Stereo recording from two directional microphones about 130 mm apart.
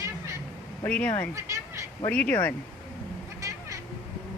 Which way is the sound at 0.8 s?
10° left (ahead or behind).